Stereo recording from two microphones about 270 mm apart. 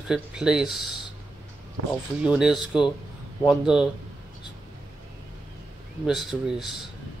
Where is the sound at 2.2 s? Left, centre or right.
Centre.